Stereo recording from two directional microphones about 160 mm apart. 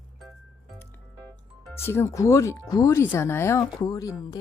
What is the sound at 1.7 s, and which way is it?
Speech, 15° left (ahead or behind).